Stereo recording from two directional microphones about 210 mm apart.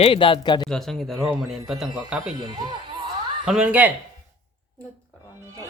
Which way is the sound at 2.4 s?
20° right (ahead or behind).